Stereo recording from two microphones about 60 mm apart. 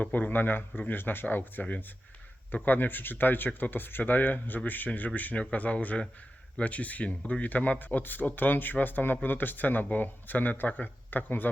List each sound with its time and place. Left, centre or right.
0.0 s speech: left